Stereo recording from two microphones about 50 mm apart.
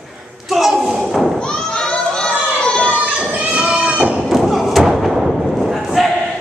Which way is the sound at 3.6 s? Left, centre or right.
Centre.